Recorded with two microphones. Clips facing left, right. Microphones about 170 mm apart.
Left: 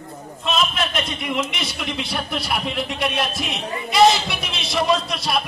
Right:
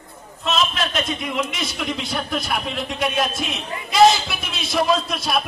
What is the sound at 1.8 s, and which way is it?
A man's voice, centre (ahead or behind).